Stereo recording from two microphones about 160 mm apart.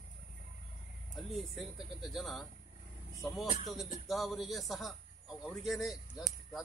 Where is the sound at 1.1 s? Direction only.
Centre (ahead or behind).